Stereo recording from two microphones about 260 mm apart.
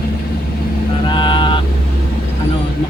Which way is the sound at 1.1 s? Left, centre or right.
Centre.